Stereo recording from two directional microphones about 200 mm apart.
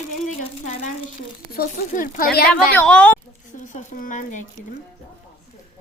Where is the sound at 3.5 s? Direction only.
40° left (ahead or behind).